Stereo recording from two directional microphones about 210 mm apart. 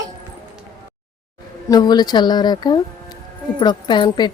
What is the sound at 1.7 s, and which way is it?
A woman's voice, 20° left (ahead or behind).